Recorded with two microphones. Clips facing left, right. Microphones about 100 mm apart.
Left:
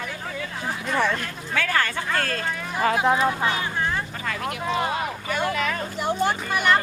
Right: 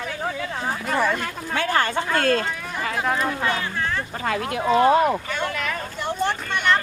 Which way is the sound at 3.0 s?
15° left (ahead or behind).